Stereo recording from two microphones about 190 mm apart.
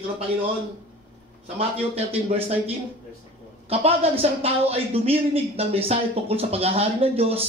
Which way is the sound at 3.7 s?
30° right (ahead or behind).